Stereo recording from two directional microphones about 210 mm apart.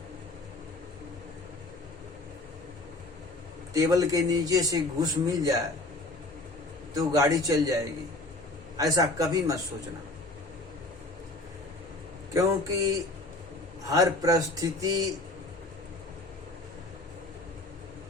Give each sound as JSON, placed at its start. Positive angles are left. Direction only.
{"t": 3.8, "sound": "a man's voice", "side_deg": -15}
{"t": 6.9, "sound": "a man's voice", "side_deg": -15}
{"t": 8.8, "sound": "a man's voice", "side_deg": -15}
{"t": 12.3, "sound": "a man's voice", "side_deg": -15}